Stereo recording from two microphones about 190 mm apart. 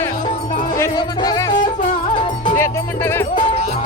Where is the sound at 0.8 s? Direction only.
20° left (ahead or behind).